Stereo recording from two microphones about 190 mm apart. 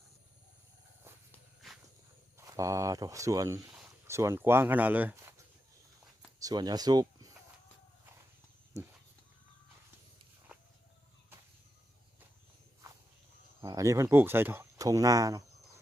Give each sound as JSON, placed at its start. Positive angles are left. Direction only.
{"t": 1.3, "sound": "walk", "side_deg": 0}
{"t": 2.5, "sound": "speech", "side_deg": -15}
{"t": 6.4, "sound": "speech", "side_deg": -20}
{"t": 13.6, "sound": "speech", "side_deg": -15}